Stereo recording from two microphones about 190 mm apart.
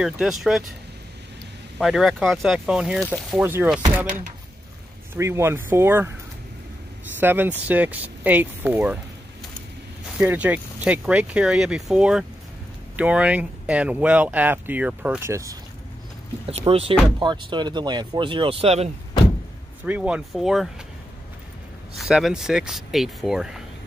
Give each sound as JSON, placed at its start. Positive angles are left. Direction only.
{"t": 0.0, "sound": "speech", "side_deg": 0}
{"t": 1.8, "sound": "speech", "side_deg": 0}
{"t": 5.1, "sound": "speech", "side_deg": -15}
{"t": 7.2, "sound": "speech", "side_deg": -10}
{"t": 10.1, "sound": "speech", "side_deg": -5}
{"t": 16.4, "sound": "speech", "side_deg": -30}
{"t": 19.8, "sound": "speech", "side_deg": -5}
{"t": 21.9, "sound": "speech", "side_deg": 0}